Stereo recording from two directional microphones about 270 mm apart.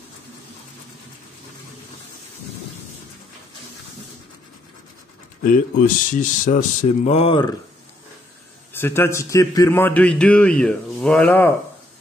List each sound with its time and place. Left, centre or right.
5.4 s speech: left
8.7 s a man's voice: centre